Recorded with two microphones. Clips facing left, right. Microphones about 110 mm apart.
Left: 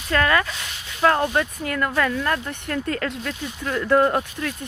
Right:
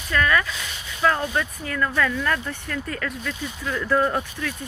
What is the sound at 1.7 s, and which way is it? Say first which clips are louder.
Speech: left 1 dB; 30° left (ahead or behind).